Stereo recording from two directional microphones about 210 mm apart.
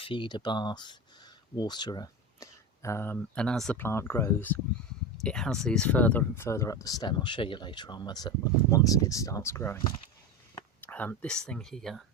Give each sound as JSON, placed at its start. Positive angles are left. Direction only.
{"t": 0.0, "sound": "speech", "side_deg": 25}